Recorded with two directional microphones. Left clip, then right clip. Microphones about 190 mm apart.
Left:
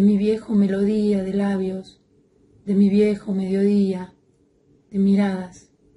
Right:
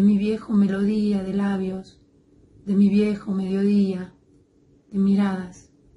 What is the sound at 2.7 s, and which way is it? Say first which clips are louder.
A woman's voice: left 3 dB; 10° left (ahead or behind).